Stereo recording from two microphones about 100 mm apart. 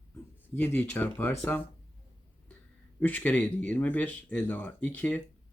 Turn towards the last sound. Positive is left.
turn(degrees=15)  # may be behind; listen again after turning